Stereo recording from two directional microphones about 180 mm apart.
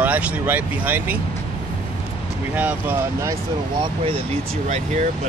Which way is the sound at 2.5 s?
10° right (ahead or behind).